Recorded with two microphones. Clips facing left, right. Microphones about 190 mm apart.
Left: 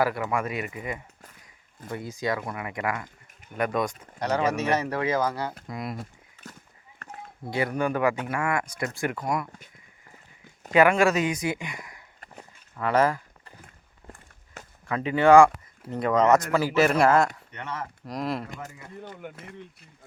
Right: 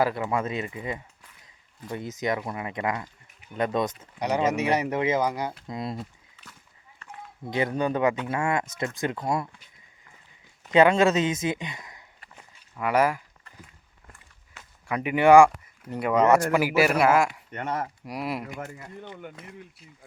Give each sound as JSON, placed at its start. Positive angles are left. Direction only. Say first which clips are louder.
{"t": 0.0, "sound": "speech", "louder": "right 1 dB", "side_deg": -25}
{"t": 6.4, "sound": "horse", "louder": "left 7 dB", "side_deg": 45}
{"t": 7.0, "sound": "a sound", "louder": "left 2 dB", "side_deg": 55}
{"t": 7.5, "sound": "speech", "louder": "right 1 dB", "side_deg": -20}
{"t": 10.7, "sound": "speech", "louder": "right 1 dB", "side_deg": -20}
{"t": 12.2, "sound": "a sound", "louder": "left 5 dB", "side_deg": 45}
{"t": 12.7, "sound": "speech", "louder": "even", "side_deg": -10}
{"t": 14.8, "sound": "speech", "louder": "even", "side_deg": -15}
{"t": 17.5, "sound": "speech", "louder": "right 5 dB", "side_deg": -45}
{"t": 18.0, "sound": "speech", "louder": "left 1 dB", "side_deg": -10}
{"t": 19.2, "sound": "speech", "louder": "left 1 dB", "side_deg": 0}